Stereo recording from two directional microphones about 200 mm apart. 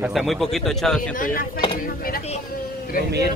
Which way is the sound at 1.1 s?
40° left (ahead or behind).